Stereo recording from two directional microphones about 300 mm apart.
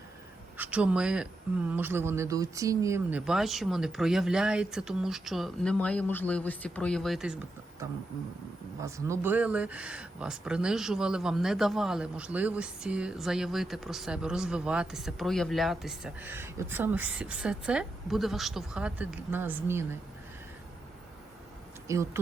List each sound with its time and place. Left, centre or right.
0.5 s speech: centre
8.8 s speech: centre
21.8 s speech: centre